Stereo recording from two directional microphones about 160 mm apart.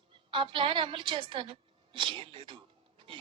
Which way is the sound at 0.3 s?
30° right (ahead or behind).